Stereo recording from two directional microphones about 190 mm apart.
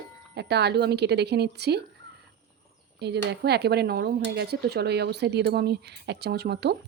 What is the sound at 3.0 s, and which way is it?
Speech, 60° right (ahead or behind).